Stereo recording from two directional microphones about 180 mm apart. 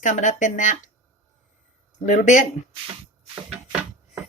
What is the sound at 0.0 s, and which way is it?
Speech, 45° left (ahead or behind).